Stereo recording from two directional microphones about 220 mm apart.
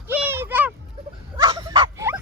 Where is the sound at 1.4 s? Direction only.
20° right (ahead or behind).